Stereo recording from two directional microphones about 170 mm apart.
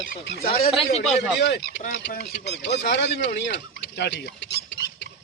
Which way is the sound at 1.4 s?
90° left.